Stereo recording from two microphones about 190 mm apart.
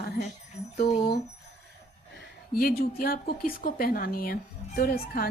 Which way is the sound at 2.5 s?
50° left (ahead or behind).